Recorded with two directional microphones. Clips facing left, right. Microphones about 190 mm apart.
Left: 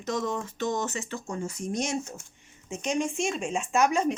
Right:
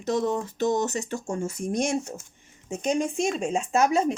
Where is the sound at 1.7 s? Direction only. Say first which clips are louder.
Right 4 dB; 55° right (ahead or behind).